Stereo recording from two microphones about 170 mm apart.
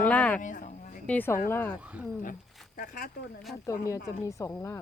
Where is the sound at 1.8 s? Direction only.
10° right (ahead or behind).